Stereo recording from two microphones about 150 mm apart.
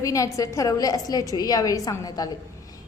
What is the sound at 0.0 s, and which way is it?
A woman's voice, 20° left (ahead or behind).